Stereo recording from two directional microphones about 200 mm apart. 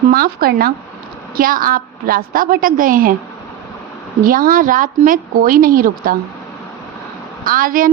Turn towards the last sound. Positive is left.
turn(degrees=-45)  # may be behind; listen again after turning